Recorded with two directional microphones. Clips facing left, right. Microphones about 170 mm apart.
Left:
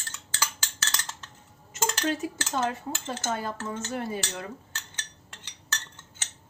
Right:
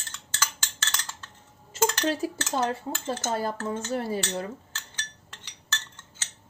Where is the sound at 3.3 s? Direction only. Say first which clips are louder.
Right 3 dB; 35° right (ahead or behind).